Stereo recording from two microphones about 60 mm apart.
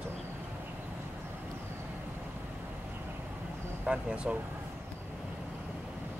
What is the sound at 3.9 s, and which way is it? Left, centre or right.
Speech, centre.